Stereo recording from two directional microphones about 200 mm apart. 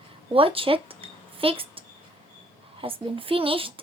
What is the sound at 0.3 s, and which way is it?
A woman's voice, 25° right (ahead or behind).